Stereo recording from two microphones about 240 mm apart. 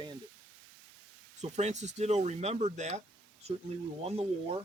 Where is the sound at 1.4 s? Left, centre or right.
Right.